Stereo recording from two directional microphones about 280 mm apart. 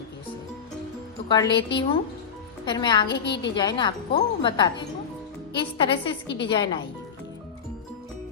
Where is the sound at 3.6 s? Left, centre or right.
Centre.